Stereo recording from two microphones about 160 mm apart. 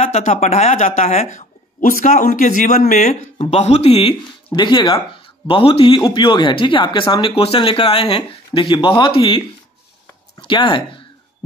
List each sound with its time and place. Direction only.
0.0 s speech: 45° left (ahead or behind)
3.3 s speech: 40° left (ahead or behind)
10.4 s speech: 30° left (ahead or behind)